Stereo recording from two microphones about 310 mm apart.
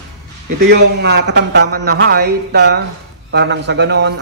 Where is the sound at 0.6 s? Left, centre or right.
Right.